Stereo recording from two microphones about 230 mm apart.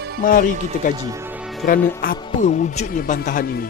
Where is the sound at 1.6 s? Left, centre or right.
Left.